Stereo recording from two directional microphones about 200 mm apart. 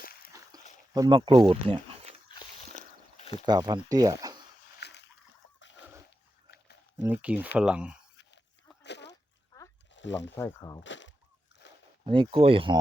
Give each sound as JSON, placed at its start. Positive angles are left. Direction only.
{"t": 0.0, "sound": "walk", "side_deg": 50}
{"t": 0.9, "sound": "speech", "side_deg": -20}
{"t": 2.7, "sound": "boat", "side_deg": 35}
{"t": 3.4, "sound": "speech", "side_deg": -20}
{"t": 4.8, "sound": "splash", "side_deg": 60}
{"t": 6.5, "sound": "a sound", "side_deg": 50}
{"t": 7.0, "sound": "speech", "side_deg": -10}
{"t": 8.8, "sound": "a sound", "side_deg": 60}
{"t": 9.9, "sound": "speech", "side_deg": 65}
{"t": 10.3, "sound": "speech", "side_deg": 15}
{"t": 10.8, "sound": "a sound", "side_deg": 65}
{"t": 12.0, "sound": "speech", "side_deg": -25}